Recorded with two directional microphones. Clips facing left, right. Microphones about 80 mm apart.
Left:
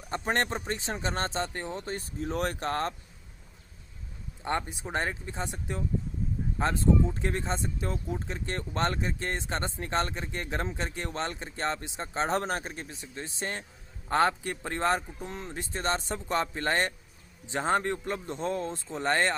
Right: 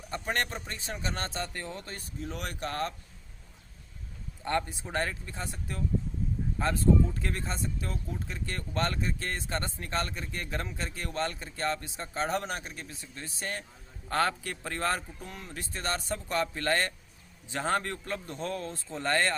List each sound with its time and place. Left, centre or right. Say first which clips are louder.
0.1 s speech: left 3 dB; left
2.2 s speech: left 6 dB; left
4.4 s speech: even; left